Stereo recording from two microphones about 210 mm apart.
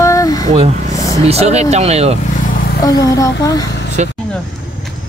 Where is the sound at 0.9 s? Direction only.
15° left (ahead or behind).